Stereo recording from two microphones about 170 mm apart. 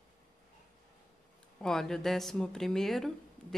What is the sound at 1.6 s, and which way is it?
Speech, 5° left (ahead or behind).